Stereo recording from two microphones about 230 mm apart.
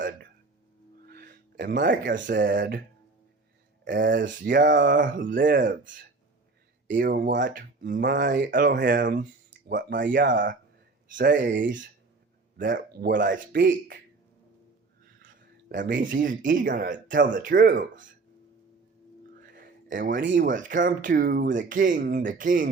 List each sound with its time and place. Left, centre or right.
1.0 s music: right
2.0 s speech: right
3.9 s speech: right
11.3 s speech: right
11.6 s speech: right
15.2 s speech: right
19.4 s a sound: right
20.3 s speech: right